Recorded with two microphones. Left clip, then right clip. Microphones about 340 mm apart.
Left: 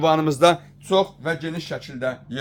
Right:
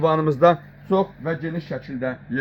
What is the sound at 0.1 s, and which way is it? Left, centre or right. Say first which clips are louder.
Speech: even; left.